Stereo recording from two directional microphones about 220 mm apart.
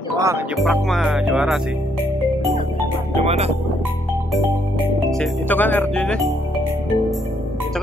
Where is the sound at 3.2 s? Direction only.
30° right (ahead or behind).